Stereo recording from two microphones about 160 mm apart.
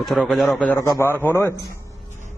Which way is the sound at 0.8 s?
20° left (ahead or behind).